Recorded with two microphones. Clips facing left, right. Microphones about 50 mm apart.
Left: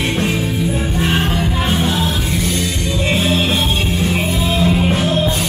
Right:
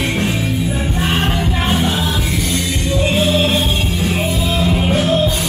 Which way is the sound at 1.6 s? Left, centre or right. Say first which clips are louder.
Right 1 dB; centre.